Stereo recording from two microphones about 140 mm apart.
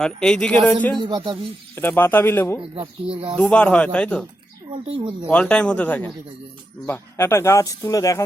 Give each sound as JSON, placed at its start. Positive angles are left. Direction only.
{"t": 0.0, "sound": "speech", "side_deg": 5}
{"t": 0.9, "sound": "speech", "side_deg": -35}
{"t": 1.7, "sound": "speech", "side_deg": 15}
{"t": 3.1, "sound": "speech", "side_deg": -40}
{"t": 3.3, "sound": "speech", "side_deg": 10}
{"t": 4.7, "sound": "speech", "side_deg": -35}
{"t": 5.3, "sound": "speech", "side_deg": 10}